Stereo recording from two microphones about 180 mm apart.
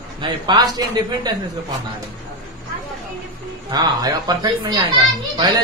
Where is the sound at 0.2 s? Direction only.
25° right (ahead or behind).